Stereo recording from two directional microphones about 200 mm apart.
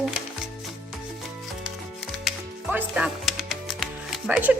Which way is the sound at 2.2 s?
5° right (ahead or behind).